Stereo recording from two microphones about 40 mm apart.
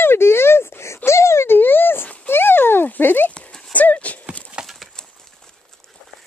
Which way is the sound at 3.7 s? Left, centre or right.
Left.